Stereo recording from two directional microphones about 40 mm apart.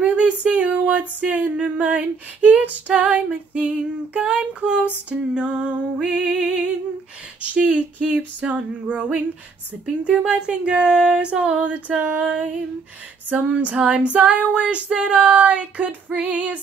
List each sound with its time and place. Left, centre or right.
0.0 s a sound: right
2.0 s female singing: right
7.4 s female singing: right
10.0 s female singing: right
12.0 s female singing: right
13.7 s female singing: right